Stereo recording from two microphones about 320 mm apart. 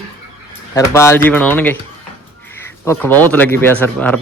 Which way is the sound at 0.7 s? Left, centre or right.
Centre.